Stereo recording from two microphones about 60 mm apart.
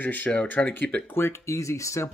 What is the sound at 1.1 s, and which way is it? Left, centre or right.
Speech, left.